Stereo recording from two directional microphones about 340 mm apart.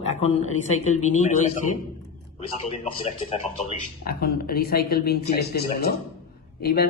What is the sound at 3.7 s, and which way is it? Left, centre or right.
Speech, left.